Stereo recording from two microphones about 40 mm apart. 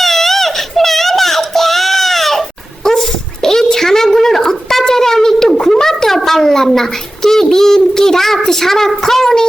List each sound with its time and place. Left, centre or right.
0.0 s baby cry: centre
2.8 s dog: centre